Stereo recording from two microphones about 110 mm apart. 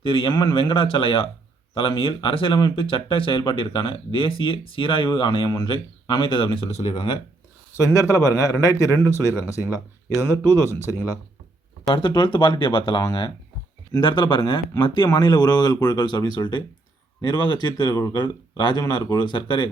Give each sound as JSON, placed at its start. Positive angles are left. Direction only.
{"t": 0.0, "sound": "speech", "side_deg": 55}
{"t": 2.6, "sound": "speech", "side_deg": 40}
{"t": 2.8, "sound": "speech", "side_deg": 55}
{"t": 5.5, "sound": "speech", "side_deg": 35}
{"t": 5.7, "sound": "speech", "side_deg": 50}
{"t": 7.8, "sound": "speech", "side_deg": 30}
{"t": 11.9, "sound": "speech", "side_deg": 50}
{"t": 14.0, "sound": "speech", "side_deg": 45}